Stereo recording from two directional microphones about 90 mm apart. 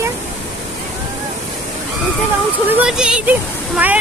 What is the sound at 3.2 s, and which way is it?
Speech, 15° right (ahead or behind).